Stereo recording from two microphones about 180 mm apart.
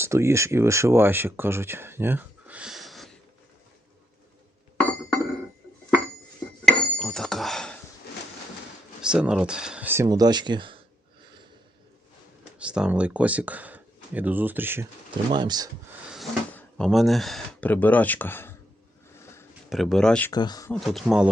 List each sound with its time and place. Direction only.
0.0 s speech: 15° right (ahead or behind); by 3.2 s centre (ahead or behind)
6.7 s dishes: 5° left (ahead or behind)
9.0 s speech: 5° right (ahead or behind); by 10.8 s 25° right (ahead or behind)
12.6 s speech: 5° right (ahead or behind)
15.3 s speech: 25° right (ahead or behind)
16.5 s speech: 5° left (ahead or behind)
19.2 s a sound: 15° left (ahead or behind)
19.7 s speech: centre (ahead or behind)
20.3 s speech: 20° left (ahead or behind)
20.8 s speech: centre (ahead or behind)